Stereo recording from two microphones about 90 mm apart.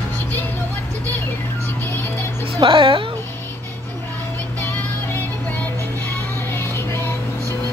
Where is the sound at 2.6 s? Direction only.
75° right (ahead or behind).